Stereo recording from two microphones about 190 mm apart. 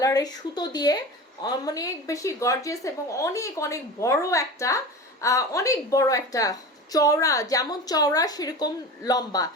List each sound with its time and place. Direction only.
0.0 s a woman's voice: 20° left (ahead or behind)